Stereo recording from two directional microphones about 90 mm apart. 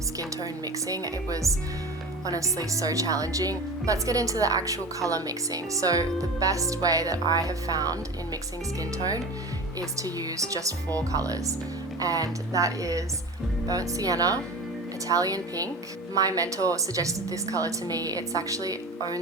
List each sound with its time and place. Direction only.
0.2 s speech: 40° right (ahead or behind)